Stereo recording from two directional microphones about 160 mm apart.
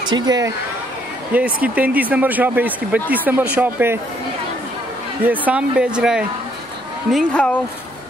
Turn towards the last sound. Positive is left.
turn(degrees=0)  # may be behind; listen again after turning